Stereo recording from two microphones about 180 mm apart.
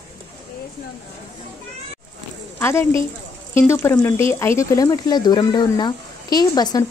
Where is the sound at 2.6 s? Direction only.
15° left (ahead or behind).